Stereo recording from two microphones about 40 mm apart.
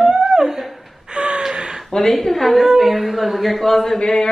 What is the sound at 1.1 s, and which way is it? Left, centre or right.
Gasp, right.